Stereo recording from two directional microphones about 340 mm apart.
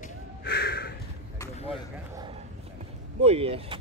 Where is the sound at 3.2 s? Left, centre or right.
Centre.